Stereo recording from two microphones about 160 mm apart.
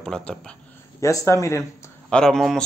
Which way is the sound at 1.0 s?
20° left (ahead or behind).